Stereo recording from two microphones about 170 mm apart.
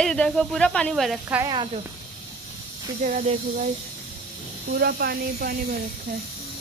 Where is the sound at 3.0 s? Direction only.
45° right (ahead or behind).